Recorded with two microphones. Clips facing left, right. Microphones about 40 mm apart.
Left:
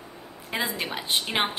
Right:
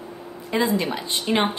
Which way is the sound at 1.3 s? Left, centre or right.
Centre.